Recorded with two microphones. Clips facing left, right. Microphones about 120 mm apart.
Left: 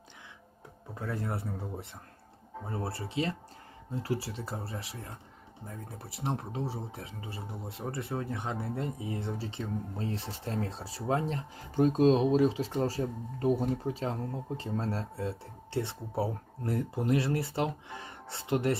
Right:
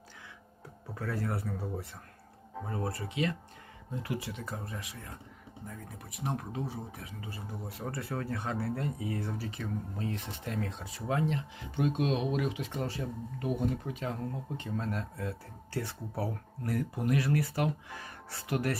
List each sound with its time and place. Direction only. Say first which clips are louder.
0.9 s speech: even; 25° left (ahead or behind)